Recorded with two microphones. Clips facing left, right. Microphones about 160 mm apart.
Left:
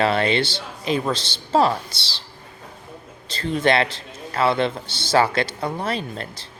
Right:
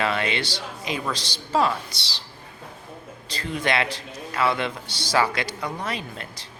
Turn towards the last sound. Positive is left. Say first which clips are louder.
# left 5 dB
turn(degrees=35)  # may be behind; listen again after turning